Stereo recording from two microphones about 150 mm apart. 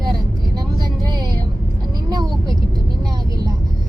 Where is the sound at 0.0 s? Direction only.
25° right (ahead or behind).